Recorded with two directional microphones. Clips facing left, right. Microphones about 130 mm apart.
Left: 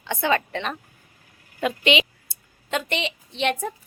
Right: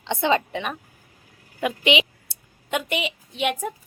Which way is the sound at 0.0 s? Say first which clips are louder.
Right 2 dB; 20° right (ahead or behind).